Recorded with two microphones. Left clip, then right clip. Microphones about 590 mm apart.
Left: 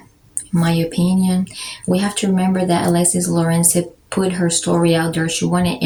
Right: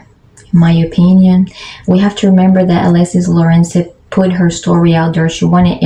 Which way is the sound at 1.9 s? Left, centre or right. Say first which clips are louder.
Right 7 dB; left.